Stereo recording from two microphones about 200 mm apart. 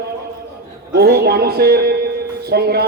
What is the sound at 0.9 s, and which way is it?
A man's voice, 55° right (ahead or behind).